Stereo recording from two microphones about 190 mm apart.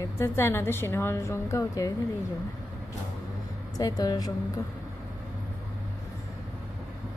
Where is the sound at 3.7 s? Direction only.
20° left (ahead or behind).